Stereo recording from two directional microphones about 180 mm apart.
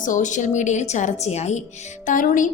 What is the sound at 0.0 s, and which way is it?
A woman's voice, 45° left (ahead or behind).